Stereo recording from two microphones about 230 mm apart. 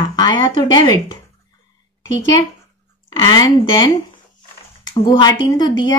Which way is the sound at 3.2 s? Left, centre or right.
Centre.